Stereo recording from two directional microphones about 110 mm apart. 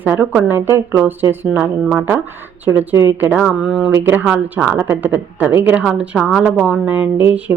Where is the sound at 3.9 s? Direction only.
20° right (ahead or behind); by 6.9 s centre (ahead or behind).